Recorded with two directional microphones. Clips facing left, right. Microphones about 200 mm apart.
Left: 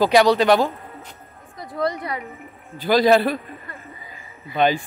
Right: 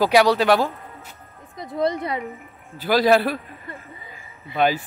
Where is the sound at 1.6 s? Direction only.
20° right (ahead or behind).